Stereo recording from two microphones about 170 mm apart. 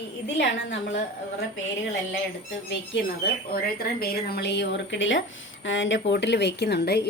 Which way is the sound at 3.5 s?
65° left (ahead or behind).